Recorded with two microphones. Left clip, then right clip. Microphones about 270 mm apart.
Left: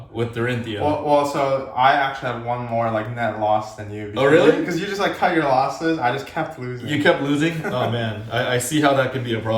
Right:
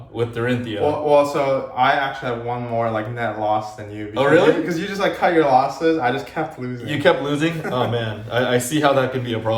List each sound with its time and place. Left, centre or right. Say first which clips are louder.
0.2 s speech: right 2 dB; centre
1.0 s a man's voice: right 3 dB; centre
4.1 s speech: even; centre
4.6 s a man's voice: right 1 dB; centre
7.0 s speech: right 1 dB; centre